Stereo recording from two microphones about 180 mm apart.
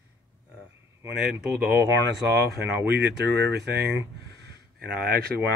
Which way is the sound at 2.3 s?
70° right (ahead or behind).